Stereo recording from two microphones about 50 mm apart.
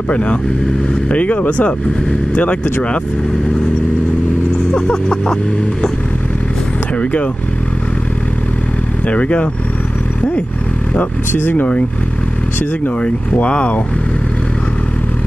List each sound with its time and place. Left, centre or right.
0.1 s speech: left
4.7 s vehicle: centre
7.0 s speech: left
9.0 s speech: left
11.3 s speech: left
13.0 s speech: left